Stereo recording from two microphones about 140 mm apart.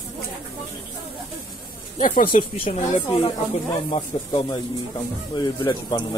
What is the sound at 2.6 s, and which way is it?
Speech, 75° left (ahead or behind).